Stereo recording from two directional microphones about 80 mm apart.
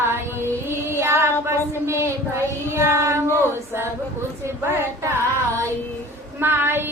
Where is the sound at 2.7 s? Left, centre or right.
Right.